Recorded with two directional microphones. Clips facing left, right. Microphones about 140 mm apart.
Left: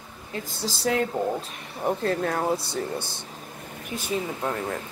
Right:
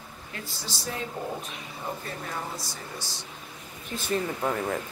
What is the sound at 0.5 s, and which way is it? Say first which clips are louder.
Speech: left 11 dB; 70° left (ahead or behind).